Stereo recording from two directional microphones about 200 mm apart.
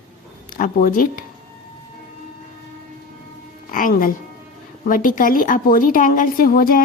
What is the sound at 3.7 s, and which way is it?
A woman's voice, 45° left (ahead or behind).